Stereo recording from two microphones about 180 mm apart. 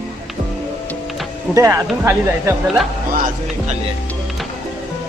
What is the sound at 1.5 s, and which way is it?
Speech, 15° right (ahead or behind).